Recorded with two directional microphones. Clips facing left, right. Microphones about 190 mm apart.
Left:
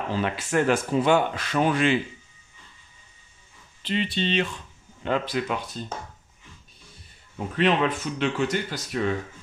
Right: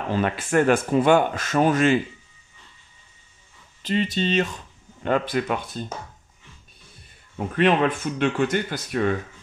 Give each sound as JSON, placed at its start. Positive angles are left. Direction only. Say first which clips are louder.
{"t": 0.1, "sound": "speech", "louder": "right 4 dB", "side_deg": -55}
{"t": 3.8, "sound": "speech", "louder": "right 3 dB", "side_deg": -45}
{"t": 7.3, "sound": "speech", "louder": "right 3 dB", "side_deg": -55}